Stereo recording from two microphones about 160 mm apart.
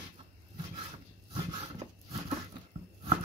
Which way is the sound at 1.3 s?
30° right (ahead or behind).